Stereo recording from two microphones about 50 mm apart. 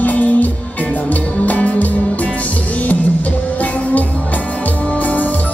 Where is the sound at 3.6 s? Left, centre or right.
Left.